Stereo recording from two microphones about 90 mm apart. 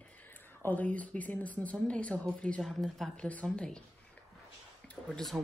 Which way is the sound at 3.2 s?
15° left (ahead or behind).